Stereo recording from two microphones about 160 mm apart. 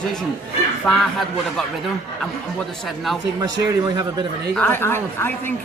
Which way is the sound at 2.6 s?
Centre (ahead or behind).